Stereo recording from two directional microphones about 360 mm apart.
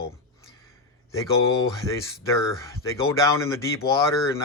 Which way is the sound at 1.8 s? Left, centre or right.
Centre.